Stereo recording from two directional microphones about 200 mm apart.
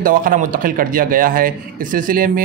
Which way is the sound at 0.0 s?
45° right (ahead or behind).